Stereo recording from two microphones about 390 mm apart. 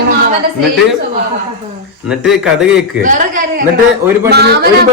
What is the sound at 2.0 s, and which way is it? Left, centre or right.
Speech, centre.